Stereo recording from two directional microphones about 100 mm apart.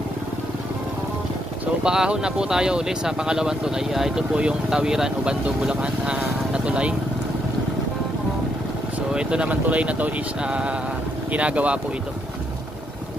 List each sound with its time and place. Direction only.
1.8 s speech: 10° right (ahead or behind)
9.1 s speech: 10° right (ahead or behind)